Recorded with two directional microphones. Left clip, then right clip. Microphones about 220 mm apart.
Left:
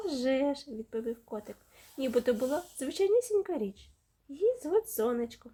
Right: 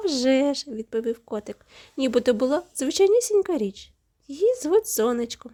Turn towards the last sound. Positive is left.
turn(degrees=-45)  # may be behind; listen again after turning